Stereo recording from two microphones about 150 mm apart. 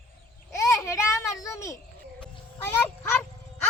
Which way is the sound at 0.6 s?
20° left (ahead or behind).